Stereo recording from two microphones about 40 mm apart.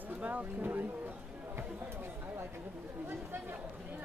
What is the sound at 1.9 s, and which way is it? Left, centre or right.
Speech, right.